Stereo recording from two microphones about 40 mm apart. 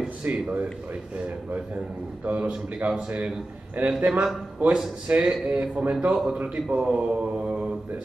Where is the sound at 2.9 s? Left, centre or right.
Right.